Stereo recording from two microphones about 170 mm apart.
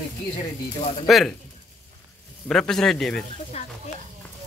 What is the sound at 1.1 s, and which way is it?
Speech, centre (ahead or behind).